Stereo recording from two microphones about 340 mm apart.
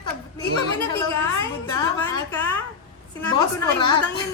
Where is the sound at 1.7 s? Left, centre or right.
Centre.